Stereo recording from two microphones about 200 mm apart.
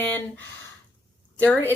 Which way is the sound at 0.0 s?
10° left (ahead or behind).